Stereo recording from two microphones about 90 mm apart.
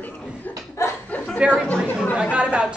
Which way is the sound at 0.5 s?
20° left (ahead or behind).